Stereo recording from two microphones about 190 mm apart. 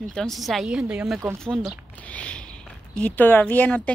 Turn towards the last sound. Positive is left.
turn(degrees=10)  # may be behind; listen again after turning